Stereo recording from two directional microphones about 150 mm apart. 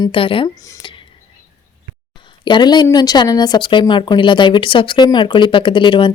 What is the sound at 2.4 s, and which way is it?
A woman's voice, 30° left (ahead or behind).